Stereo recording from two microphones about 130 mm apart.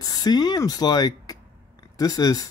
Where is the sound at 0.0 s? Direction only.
30° left (ahead or behind).